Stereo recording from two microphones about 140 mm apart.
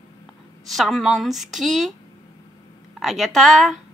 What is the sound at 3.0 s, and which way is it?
Speech, centre (ahead or behind).